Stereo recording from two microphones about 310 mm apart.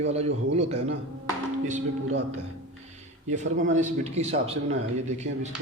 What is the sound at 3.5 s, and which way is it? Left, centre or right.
Speech, right.